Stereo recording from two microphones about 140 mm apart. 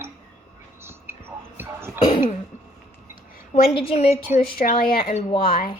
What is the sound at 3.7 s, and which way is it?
A woman's voice, 45° left (ahead or behind).